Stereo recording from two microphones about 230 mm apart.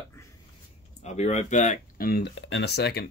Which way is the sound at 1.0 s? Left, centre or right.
Left.